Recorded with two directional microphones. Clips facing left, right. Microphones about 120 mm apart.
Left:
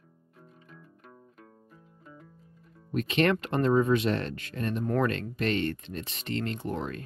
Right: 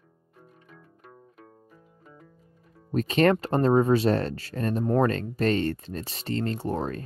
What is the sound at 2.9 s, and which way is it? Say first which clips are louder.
Speech: right 4 dB; 35° right (ahead or behind).